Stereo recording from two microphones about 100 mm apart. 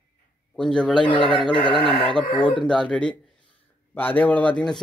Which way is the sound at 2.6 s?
10° left (ahead or behind).